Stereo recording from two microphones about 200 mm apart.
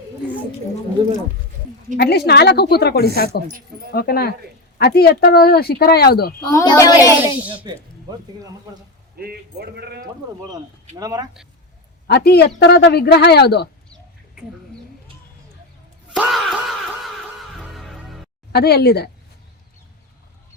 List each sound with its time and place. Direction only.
2.0 s speech: 55° left (ahead or behind)
6.4 s a child's voice: 20° left (ahead or behind)
7.2 s speech: 10° right (ahead or behind)
9.1 s speech: 50° right (ahead or behind)
10.9 s speech: 20° right (ahead or behind)
12.0 s speech: 55° left (ahead or behind)
16.1 s a sound: centre (ahead or behind)
17.6 s music: centre (ahead or behind)
18.5 s speech: 55° left (ahead or behind)